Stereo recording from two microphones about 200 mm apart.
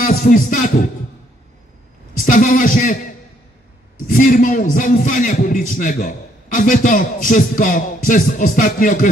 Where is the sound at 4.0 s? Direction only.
45° left (ahead or behind).